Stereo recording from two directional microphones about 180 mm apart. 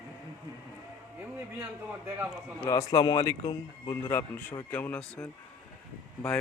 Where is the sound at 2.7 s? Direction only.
20° left (ahead or behind).